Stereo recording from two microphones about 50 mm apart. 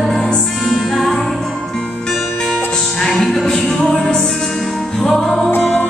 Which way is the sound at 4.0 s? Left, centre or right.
Centre.